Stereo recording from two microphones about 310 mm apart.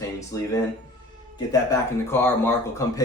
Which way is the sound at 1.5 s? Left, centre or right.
Centre.